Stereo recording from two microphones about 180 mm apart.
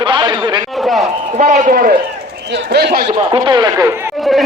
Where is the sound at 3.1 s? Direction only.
25° right (ahead or behind).